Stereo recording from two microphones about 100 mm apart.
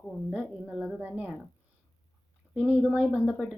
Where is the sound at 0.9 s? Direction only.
15° right (ahead or behind).